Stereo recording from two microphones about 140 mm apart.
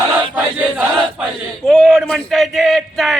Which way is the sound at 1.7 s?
Centre (ahead or behind).